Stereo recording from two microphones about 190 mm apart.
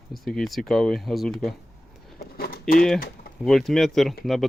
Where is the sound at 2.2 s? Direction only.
55° left (ahead or behind).